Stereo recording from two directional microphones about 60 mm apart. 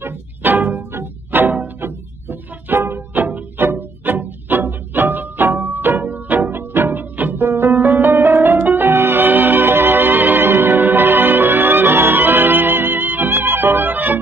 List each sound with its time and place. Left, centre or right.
0.0 s music: right
7.7 s music: right